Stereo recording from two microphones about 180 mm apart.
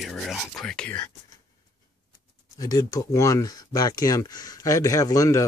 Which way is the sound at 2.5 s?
20° left (ahead or behind).